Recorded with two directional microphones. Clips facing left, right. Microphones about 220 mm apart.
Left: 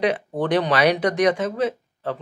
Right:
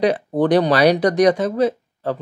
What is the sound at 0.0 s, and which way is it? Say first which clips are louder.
Speech: right 5 dB; 35° right (ahead or behind).